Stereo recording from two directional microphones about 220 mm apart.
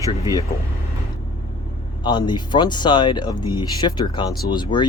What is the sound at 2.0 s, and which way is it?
Speech, 20° left (ahead or behind).